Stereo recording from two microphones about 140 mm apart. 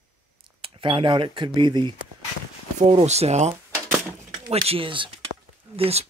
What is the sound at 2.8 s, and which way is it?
Speech, 50° right (ahead or behind).